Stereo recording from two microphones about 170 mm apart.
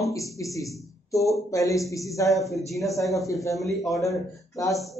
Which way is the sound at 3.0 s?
20° left (ahead or behind).